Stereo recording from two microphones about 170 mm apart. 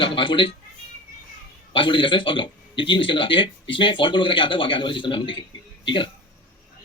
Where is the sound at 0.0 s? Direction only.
30° left (ahead or behind).